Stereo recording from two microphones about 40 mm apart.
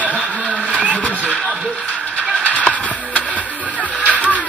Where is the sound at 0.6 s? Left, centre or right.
Right.